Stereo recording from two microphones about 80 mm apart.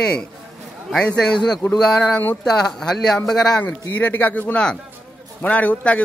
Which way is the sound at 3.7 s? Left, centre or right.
Left.